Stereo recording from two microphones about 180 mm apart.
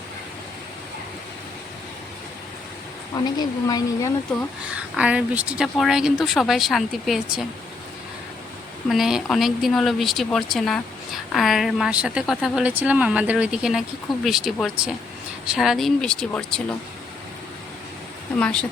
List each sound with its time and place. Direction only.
3.3 s speech: 20° left (ahead or behind)
4.7 s speech: 5° right (ahead or behind)
8.9 s speech: centre (ahead or behind)
18.3 s speech: 5° left (ahead or behind)